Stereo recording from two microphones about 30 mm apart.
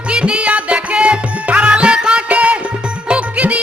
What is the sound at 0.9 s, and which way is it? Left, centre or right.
Music, right.